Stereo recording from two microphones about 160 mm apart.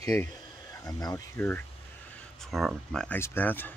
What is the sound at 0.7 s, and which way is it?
Speech, 20° left (ahead or behind).